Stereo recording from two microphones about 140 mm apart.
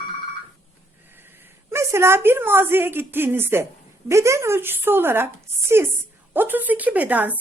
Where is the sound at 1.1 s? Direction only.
15° right (ahead or behind).